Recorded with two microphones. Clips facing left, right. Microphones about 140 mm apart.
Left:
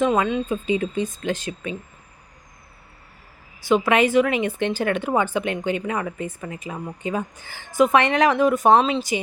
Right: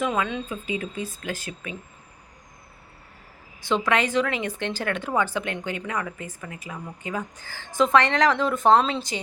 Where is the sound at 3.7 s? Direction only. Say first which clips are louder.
Left 5 dB; 10° left (ahead or behind).